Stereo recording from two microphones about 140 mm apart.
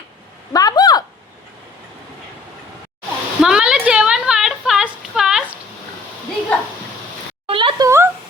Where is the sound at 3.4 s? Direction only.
5° right (ahead or behind).